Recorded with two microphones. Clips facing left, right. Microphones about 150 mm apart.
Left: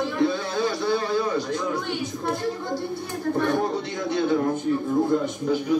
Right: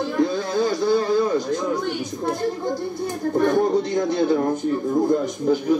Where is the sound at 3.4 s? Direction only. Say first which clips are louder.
Right 6 dB; 40° right (ahead or behind).